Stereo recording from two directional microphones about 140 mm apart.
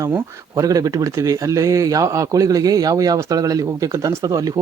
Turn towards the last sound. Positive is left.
turn(degrees=-25)  # may be behind; listen again after turning